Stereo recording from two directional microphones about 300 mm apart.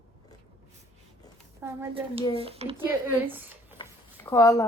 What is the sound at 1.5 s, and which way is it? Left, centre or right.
Speech, centre.